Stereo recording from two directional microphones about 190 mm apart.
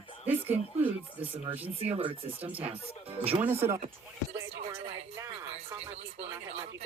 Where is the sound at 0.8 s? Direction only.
30° right (ahead or behind).